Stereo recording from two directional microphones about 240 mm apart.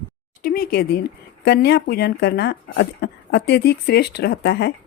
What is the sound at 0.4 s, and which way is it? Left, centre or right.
Speech, left.